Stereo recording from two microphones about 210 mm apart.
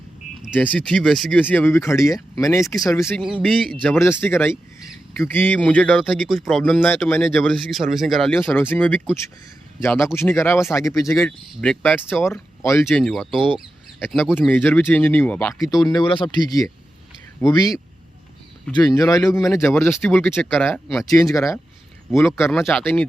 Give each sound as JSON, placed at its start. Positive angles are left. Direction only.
{"t": 0.5, "sound": "speech", "side_deg": 5}
{"t": 3.2, "sound": "speech", "side_deg": -5}
{"t": 3.8, "sound": "speech", "side_deg": 10}
{"t": 6.8, "sound": "speech", "side_deg": 10}
{"t": 12.2, "sound": "speech", "side_deg": 15}
{"t": 15.8, "sound": "speech", "side_deg": 20}
{"t": 21.0, "sound": "speech", "side_deg": 15}